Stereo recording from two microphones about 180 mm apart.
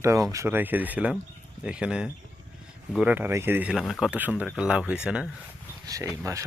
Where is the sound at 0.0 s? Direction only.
15° right (ahead or behind).